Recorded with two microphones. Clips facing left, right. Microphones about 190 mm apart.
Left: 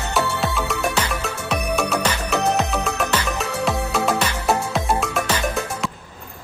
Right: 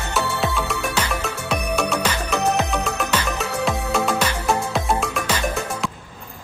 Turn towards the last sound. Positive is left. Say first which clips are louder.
# left 1 dB
turn(degrees=5)  # may be behind; listen again after turning